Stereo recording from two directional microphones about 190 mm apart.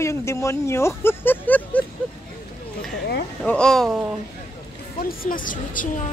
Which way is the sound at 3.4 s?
5° left (ahead or behind).